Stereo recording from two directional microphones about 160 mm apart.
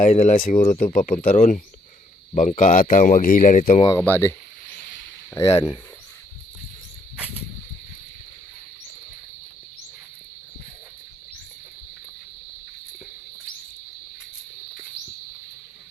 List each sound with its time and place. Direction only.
0.0 s a man's voice: 45° left (ahead or behind)
3.9 s speech: 15° left (ahead or behind)